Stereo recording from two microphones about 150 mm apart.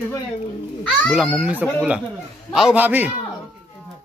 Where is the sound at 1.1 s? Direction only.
5° right (ahead or behind).